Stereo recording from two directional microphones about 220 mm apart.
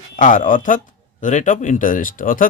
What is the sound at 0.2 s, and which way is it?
Speech, 35° left (ahead or behind).